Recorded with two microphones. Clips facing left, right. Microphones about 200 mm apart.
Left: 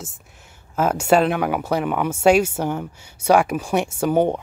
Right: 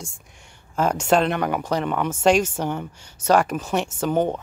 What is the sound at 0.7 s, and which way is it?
A man's voice, 5° left (ahead or behind).